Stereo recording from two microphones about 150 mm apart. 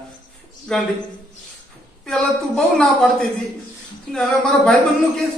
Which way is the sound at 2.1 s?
5° left (ahead or behind).